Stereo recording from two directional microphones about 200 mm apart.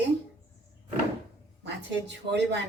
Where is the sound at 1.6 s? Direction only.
60° right (ahead or behind).